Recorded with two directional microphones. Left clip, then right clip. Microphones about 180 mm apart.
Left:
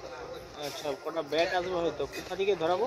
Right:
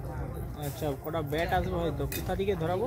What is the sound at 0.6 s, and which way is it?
Speech, 45° left (ahead or behind).